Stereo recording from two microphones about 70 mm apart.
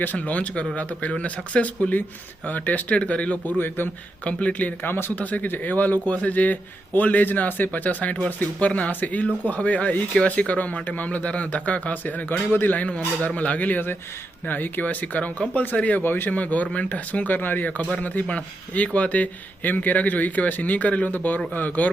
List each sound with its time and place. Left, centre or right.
0.0 s speech: left